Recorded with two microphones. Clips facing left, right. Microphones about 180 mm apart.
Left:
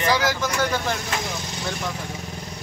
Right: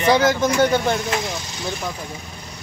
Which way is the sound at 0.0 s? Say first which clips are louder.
Right 6 dB; 25° right (ahead or behind).